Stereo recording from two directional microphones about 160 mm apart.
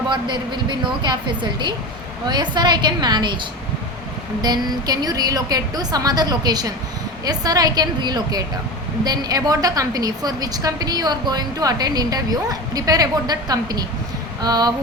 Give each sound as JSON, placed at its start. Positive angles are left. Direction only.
{"t": 0.1, "sound": "a woman's voice", "side_deg": -30}
{"t": 4.4, "sound": "a woman's voice", "side_deg": -25}